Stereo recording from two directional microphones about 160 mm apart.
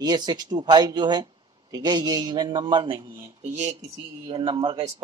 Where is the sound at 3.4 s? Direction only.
45° right (ahead or behind).